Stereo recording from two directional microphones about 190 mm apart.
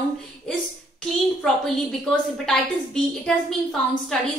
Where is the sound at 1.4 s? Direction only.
Centre (ahead or behind).